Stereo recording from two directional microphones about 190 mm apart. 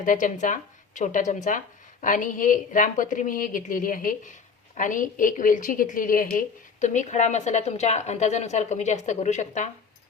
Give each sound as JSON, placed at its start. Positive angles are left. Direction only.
{"t": 0.0, "sound": "speech", "side_deg": 45}